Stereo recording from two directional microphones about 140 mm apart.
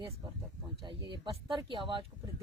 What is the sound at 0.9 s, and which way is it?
Speech, 35° right (ahead or behind).